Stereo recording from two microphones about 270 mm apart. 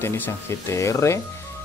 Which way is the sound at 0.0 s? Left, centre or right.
Centre.